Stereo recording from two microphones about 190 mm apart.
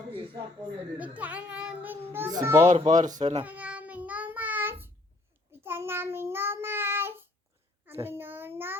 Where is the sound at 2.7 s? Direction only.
40° right (ahead or behind).